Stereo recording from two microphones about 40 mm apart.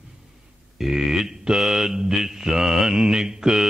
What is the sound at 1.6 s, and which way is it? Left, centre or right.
Mantra, centre.